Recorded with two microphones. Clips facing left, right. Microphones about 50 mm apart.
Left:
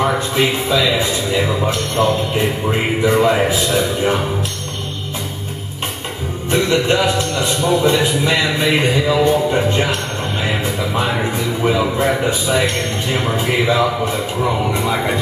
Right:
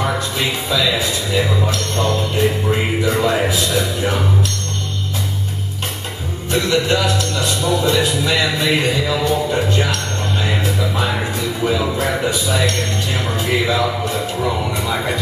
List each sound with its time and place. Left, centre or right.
0.0 s speech: centre
6.5 s speech: left
10.4 s music: left
11.6 s speech: left